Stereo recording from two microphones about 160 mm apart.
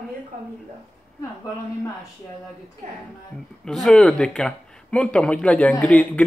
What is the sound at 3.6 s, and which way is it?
Speech, 5° left (ahead or behind).